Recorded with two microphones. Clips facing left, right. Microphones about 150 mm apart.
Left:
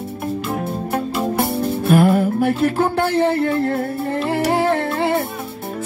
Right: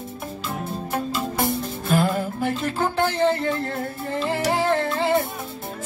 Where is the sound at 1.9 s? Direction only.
55° left (ahead or behind).